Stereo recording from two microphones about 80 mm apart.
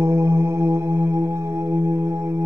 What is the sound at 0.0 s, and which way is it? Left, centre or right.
Music, right.